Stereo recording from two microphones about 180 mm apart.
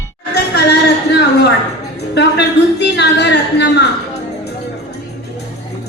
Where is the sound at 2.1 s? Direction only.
70° left (ahead or behind).